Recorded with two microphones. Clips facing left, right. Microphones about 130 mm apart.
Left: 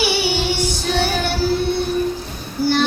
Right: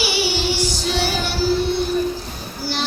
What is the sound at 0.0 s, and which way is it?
Child singing, 55° left (ahead or behind).